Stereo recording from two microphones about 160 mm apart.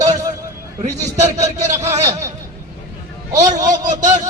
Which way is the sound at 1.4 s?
45° right (ahead or behind).